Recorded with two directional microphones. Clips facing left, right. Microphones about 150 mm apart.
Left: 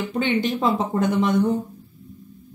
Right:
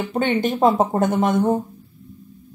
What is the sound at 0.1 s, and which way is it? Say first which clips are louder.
Speech: right 2 dB; 50° right (ahead or behind).